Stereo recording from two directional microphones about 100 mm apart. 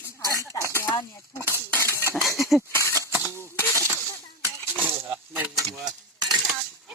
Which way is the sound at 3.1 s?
25° right (ahead or behind).